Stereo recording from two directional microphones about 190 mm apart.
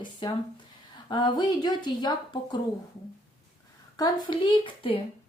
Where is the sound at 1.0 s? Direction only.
20° left (ahead or behind).